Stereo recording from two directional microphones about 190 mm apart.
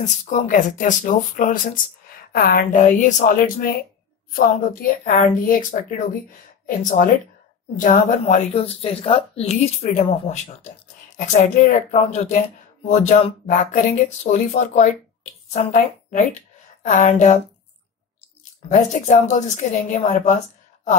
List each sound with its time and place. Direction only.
0.0 s a woman's voice: 40° left (ahead or behind)
18.7 s speech: 40° left (ahead or behind)